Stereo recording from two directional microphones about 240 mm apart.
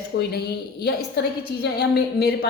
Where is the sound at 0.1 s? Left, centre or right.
Left.